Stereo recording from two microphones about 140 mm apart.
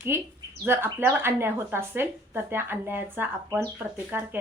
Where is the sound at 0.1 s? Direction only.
15° right (ahead or behind).